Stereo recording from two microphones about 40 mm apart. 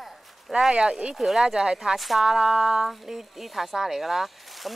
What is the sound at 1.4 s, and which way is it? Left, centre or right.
Speech, centre.